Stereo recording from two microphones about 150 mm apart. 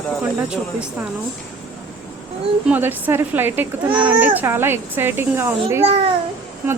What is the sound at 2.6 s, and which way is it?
A woman's voice, 15° right (ahead or behind).